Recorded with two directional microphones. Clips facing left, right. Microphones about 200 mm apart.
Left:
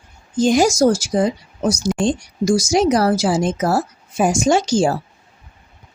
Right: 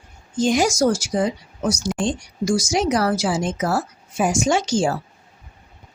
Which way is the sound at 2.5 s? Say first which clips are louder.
Left 4 dB; 10° left (ahead or behind).